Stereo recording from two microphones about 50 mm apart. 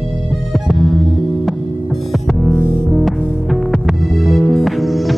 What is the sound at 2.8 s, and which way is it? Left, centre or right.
Music, centre.